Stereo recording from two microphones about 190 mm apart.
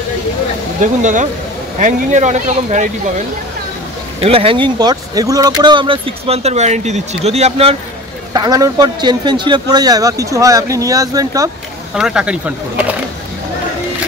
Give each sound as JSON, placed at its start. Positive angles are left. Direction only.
{"t": 1.8, "sound": "speech", "side_deg": -40}
{"t": 4.2, "sound": "speech", "side_deg": -30}
{"t": 8.3, "sound": "a man's voice", "side_deg": -20}
{"t": 11.9, "sound": "speech", "side_deg": -5}